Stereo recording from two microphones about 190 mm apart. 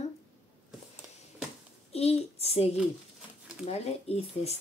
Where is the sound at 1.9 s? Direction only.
30° left (ahead or behind).